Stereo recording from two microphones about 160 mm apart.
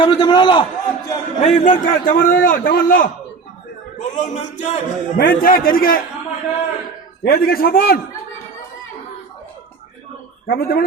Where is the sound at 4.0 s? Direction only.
50° left (ahead or behind).